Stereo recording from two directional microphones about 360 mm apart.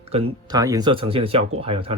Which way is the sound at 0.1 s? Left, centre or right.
Centre.